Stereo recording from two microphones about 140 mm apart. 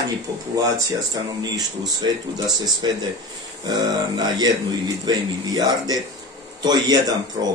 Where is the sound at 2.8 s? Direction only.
35° right (ahead or behind).